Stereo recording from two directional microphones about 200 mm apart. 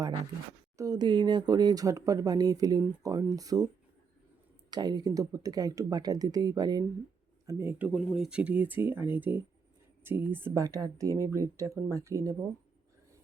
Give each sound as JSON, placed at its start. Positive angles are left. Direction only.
{"t": 0.8, "sound": "speech", "side_deg": -20}
{"t": 4.7, "sound": "speech", "side_deg": -20}